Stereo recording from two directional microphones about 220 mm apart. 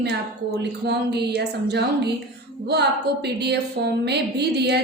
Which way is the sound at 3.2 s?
50° right (ahead or behind).